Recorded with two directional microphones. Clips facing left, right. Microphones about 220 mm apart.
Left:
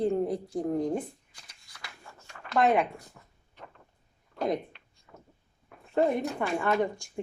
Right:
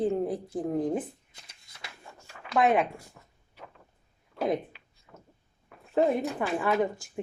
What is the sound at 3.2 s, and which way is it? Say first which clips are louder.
Vehicle: even; centre (ahead or behind).